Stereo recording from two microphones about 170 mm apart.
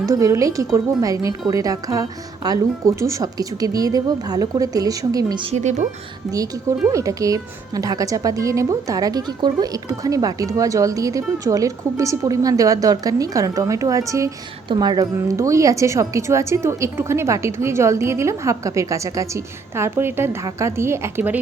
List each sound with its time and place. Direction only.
0.0 s speech: 20° right (ahead or behind)
5.5 s speech: 45° right (ahead or behind)
6.3 s speech: 20° right (ahead or behind)